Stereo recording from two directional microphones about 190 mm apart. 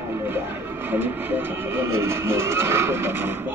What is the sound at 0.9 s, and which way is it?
Speech, 10° right (ahead or behind).